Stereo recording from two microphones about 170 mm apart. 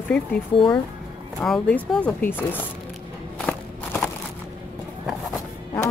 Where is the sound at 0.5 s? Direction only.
30° left (ahead or behind).